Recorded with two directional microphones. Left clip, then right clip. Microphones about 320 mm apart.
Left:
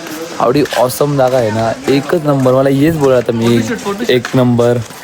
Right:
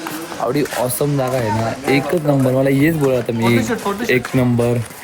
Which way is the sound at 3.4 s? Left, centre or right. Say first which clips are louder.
Left 3 dB; centre.